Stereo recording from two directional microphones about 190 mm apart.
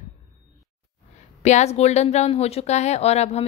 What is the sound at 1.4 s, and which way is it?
Speech, 35° left (ahead or behind).